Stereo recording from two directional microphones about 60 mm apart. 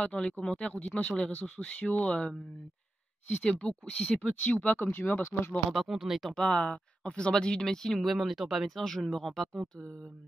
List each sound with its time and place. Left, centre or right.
0.0 s speech: centre
3.4 s speech: centre; by 5.2 s left
5.7 s speech: centre
6.3 s speech: centre